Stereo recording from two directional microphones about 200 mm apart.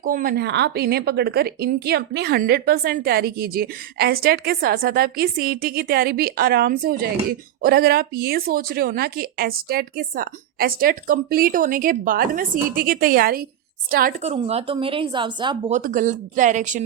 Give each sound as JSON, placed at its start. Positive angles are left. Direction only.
{"t": 0.0, "sound": "a woman's voice", "side_deg": -45}
{"t": 14.2, "sound": "speech", "side_deg": -30}
{"t": 15.7, "sound": "speech", "side_deg": -40}